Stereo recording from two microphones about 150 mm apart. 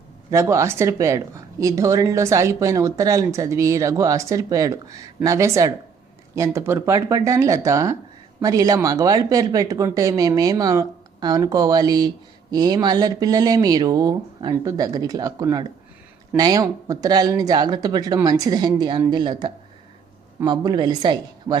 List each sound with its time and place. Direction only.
0.3 s speech: 20° right (ahead or behind)